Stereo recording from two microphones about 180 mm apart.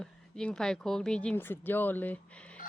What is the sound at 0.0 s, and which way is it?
Speech, 5° left (ahead or behind).